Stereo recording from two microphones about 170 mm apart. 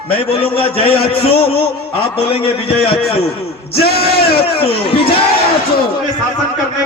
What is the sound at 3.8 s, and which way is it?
Speech, 65° left (ahead or behind).